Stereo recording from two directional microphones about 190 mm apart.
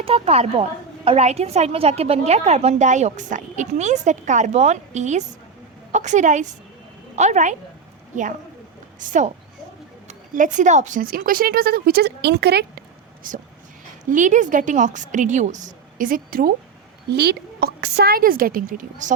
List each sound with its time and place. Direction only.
0.0 s a woman's voice: 30° right (ahead or behind)
9.0 s a woman's voice: 40° right (ahead or behind); by 12.8 s 60° right (ahead or behind)
13.2 s a woman's voice: 45° right (ahead or behind)